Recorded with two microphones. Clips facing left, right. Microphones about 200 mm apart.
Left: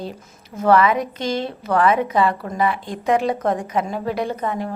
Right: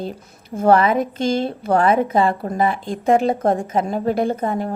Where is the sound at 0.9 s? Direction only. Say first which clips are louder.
Right 3 dB; 50° right (ahead or behind).